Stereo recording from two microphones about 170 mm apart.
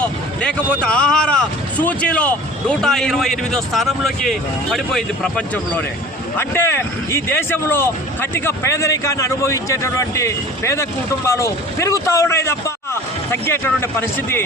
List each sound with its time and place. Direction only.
0.0 s speech: 5° left (ahead or behind)
6.3 s speech: 15° left (ahead or behind)